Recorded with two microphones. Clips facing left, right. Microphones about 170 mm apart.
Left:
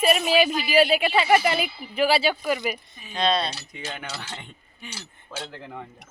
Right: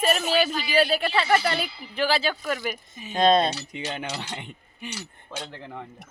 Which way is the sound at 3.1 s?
45° right (ahead or behind).